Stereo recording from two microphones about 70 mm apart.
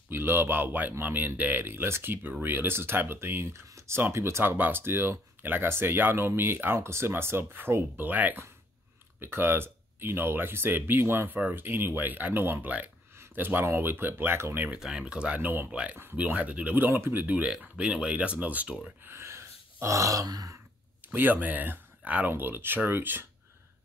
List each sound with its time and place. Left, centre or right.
0.1 s speech: right
3.6 s a sound: right
4.1 s speech: right
14.8 s speech: centre; by 15.7 s right
15.7 s speech: centre
16.0 s speech: right
17.4 s speech: centre
19.0 s gasp: right
21.1 s speech: right